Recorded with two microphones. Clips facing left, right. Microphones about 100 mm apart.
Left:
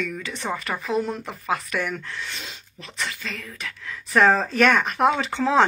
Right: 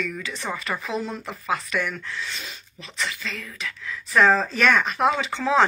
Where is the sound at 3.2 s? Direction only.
50° left (ahead or behind).